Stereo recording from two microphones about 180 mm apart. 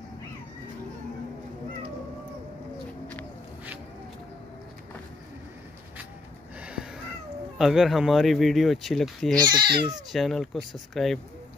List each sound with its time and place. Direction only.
6.6 s cat: 5° right (ahead or behind)
7.5 s speech: centre (ahead or behind)
9.3 s speech: 25° right (ahead or behind)
10.1 s speech: centre (ahead or behind)